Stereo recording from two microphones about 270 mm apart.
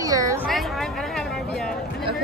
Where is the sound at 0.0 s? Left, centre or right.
Centre.